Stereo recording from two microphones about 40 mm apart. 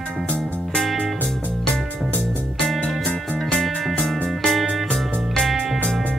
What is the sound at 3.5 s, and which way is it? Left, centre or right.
Music, centre.